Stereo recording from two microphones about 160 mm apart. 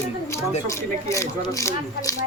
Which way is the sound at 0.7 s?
15° left (ahead or behind).